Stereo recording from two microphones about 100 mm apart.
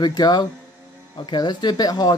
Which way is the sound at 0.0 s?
45° left (ahead or behind).